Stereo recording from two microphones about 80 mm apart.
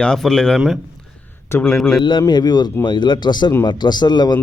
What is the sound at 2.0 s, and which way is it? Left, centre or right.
Speech, left.